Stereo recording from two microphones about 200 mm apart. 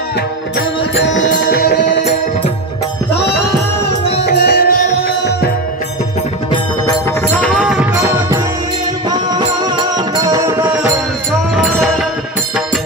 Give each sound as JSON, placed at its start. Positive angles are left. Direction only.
{"t": 0.6, "sound": "music", "side_deg": 65}
{"t": 1.3, "sound": "music", "side_deg": 50}
{"t": 3.1, "sound": "music", "side_deg": 55}
{"t": 6.5, "sound": "music", "side_deg": 15}
{"t": 7.9, "sound": "music", "side_deg": -15}